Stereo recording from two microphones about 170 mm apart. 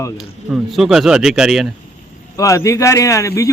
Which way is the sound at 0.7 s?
Centre (ahead or behind).